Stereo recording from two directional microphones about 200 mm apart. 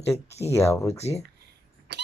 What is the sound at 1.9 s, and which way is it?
Vehicle, 60° right (ahead or behind).